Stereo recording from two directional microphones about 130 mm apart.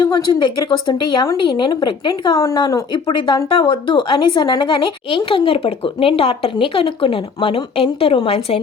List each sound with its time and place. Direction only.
0.0 s a woman's voice: 35° left (ahead or behind); by 8.5 s 50° left (ahead or behind)